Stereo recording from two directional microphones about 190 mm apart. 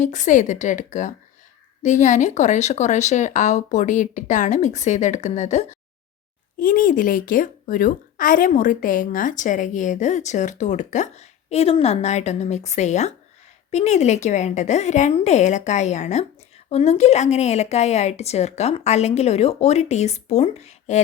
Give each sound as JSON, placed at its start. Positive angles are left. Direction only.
{"t": 0.0, "sound": "a woman's voice", "side_deg": 40}